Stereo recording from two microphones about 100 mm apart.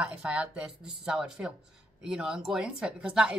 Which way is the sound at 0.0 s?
10° right (ahead or behind).